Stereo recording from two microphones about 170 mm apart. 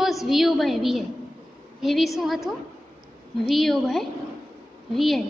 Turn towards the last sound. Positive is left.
turn(degrees=0)  # may be behind; listen again after turning